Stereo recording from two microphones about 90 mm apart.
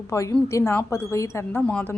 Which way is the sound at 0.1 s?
35° left (ahead or behind).